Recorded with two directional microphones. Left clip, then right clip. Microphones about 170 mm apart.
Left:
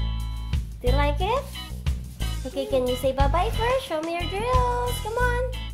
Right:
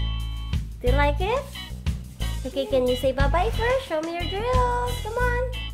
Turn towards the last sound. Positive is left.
turn(degrees=0)  # may be behind; listen again after turning